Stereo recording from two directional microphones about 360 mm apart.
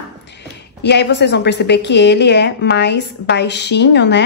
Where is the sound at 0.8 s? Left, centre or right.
Left.